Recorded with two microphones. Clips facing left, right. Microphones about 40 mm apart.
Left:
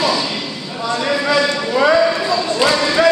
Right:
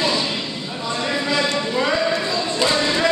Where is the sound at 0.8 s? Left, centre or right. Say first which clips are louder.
Left 5 dB; right.